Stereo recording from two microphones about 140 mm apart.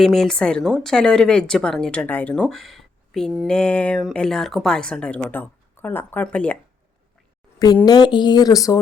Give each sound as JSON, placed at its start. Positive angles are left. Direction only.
{"t": 0.0, "sound": "a woman's voice", "side_deg": 0}
{"t": 7.9, "sound": "speech", "side_deg": 30}